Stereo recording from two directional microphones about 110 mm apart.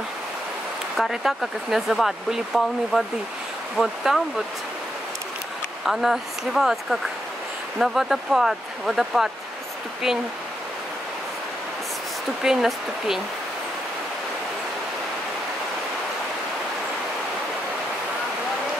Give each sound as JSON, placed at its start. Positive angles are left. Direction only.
{"t": 0.9, "sound": "speech", "side_deg": 0}
{"t": 5.9, "sound": "speech", "side_deg": -5}
{"t": 12.4, "sound": "speech", "side_deg": -5}